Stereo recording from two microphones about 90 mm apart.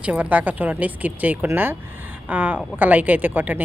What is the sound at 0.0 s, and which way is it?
Speech, 15° right (ahead or behind).